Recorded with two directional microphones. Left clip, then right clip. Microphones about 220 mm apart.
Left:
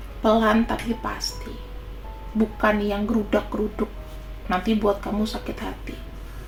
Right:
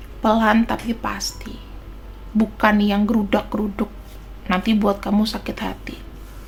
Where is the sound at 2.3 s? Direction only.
25° right (ahead or behind).